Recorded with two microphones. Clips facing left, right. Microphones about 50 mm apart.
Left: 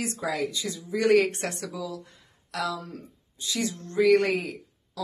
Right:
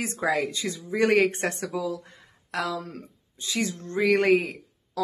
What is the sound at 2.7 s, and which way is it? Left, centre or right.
Speech, right.